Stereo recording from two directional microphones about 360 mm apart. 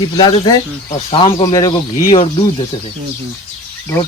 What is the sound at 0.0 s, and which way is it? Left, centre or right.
Speech, centre.